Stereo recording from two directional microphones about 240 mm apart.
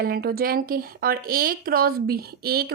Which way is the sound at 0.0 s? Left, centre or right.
Right.